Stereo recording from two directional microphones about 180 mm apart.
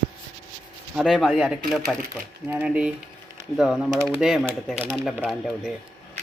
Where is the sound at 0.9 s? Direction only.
5° right (ahead or behind).